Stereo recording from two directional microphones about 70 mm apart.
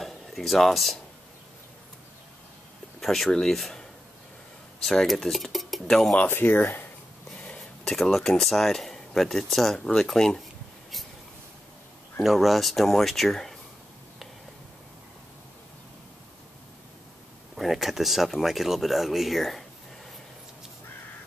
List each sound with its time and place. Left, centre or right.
0.0 s a sound: centre
3.0 s speech: centre
4.8 s speech: centre
6.4 s speech: left
7.3 s speech: centre
12.2 s speech: centre
17.6 s speech: centre